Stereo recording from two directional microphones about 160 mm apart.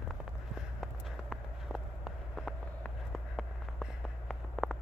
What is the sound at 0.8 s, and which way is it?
Walk, centre (ahead or behind).